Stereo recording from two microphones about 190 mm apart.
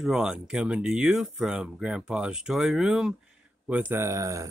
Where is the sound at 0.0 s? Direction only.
5° right (ahead or behind).